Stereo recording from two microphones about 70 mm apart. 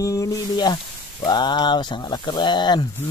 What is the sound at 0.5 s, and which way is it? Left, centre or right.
Snake, left.